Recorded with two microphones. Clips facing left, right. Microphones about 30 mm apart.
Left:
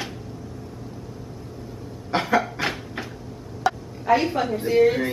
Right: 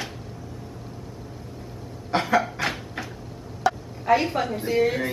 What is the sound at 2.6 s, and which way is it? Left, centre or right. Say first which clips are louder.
Cupboard open or close: left 1 dB; centre.